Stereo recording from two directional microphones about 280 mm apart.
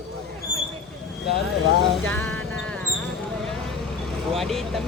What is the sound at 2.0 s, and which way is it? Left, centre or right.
Music, centre.